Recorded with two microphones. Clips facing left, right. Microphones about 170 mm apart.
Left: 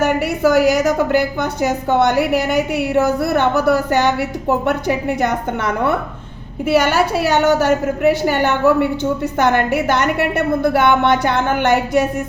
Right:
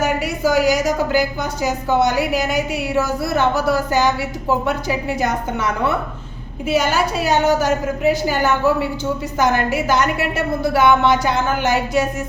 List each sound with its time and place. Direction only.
0.0 s a woman's voice: 60° left (ahead or behind)